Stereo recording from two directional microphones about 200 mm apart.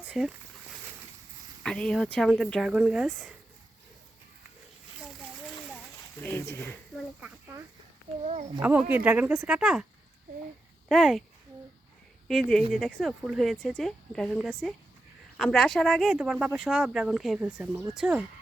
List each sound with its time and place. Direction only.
0.1 s speech: centre (ahead or behind)
1.6 s speech: 5° left (ahead or behind)
6.2 s speech: 10° left (ahead or behind)
7.2 s speech: 10° right (ahead or behind)
8.2 s a child's voice: 35° right (ahead or behind)
8.6 s speech: 10° right (ahead or behind)
10.8 s speech: centre (ahead or behind)
12.3 s speech: centre (ahead or behind)